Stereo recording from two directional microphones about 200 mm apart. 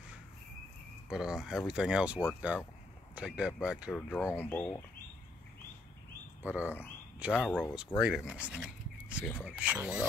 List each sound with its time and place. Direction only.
1.0 s speech: 5° right (ahead or behind)
4.3 s speech: 10° left (ahead or behind)
6.4 s speech: 10° right (ahead or behind)